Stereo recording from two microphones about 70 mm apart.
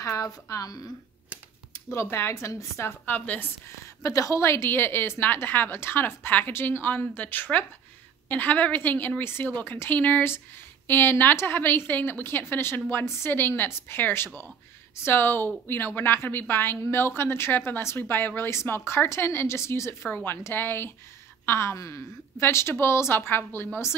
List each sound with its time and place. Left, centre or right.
0.0 s a woman's voice: left
1.7 s speech: left
3.1 s a woman's voice: left
3.6 s a woman's voice: left